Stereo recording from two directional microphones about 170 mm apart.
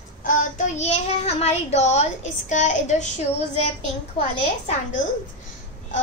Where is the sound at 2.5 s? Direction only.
45° left (ahead or behind).